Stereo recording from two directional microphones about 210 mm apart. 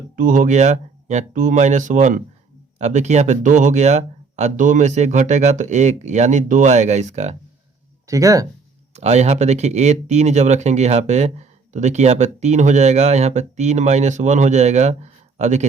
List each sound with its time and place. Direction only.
0.2 s speech: 40° right (ahead or behind)
8.0 s speech: 15° right (ahead or behind)
9.0 s speech: 30° right (ahead or behind)